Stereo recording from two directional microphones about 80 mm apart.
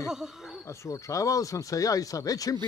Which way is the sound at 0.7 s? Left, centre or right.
Left.